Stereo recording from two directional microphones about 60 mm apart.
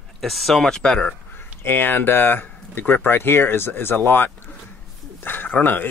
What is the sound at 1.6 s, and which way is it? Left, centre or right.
Speech, left.